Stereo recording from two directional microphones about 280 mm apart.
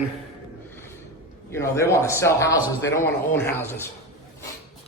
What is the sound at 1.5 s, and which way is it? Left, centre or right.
A man's voice, centre.